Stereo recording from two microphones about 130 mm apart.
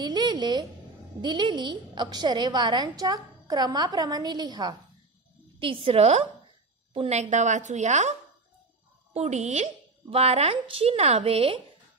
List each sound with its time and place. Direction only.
0.0 s a woman's voice: 35° right (ahead or behind)
5.6 s speech: 45° right (ahead or behind)
7.1 s a woman's voice: 65° right (ahead or behind); by 11.6 s 50° right (ahead or behind)